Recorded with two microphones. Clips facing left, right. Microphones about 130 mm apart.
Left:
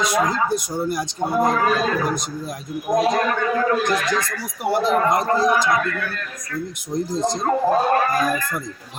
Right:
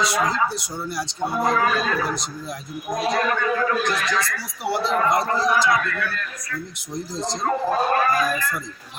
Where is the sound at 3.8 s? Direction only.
50° left (ahead or behind).